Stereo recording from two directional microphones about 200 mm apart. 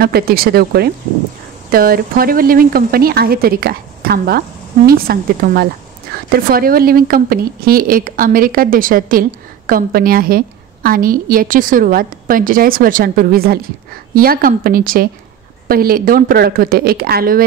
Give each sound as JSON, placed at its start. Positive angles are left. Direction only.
{"t": 0.0, "sound": "speech", "side_deg": -50}